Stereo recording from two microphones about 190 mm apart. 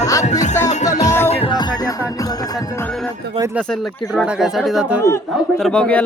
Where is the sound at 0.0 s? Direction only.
15° left (ahead or behind).